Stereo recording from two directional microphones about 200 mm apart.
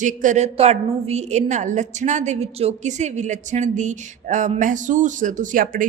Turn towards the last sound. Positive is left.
turn(degrees=-45)  # may be behind; listen again after turning